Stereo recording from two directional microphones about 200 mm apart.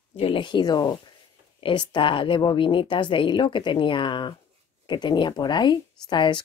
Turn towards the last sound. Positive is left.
turn(degrees=25)  # may be behind; listen again after turning